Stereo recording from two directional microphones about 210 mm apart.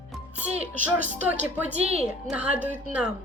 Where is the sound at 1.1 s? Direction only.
5° right (ahead or behind).